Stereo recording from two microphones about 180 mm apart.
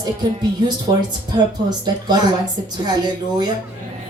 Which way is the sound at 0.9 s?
25° right (ahead or behind).